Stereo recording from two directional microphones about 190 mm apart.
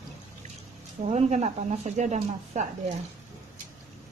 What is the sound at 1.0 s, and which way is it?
Speech, 35° right (ahead or behind).